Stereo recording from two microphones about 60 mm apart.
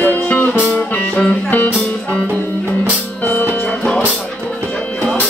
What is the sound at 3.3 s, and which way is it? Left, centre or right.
Music, left.